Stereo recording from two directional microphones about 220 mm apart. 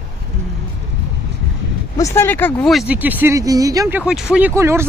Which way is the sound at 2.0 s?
10° left (ahead or behind).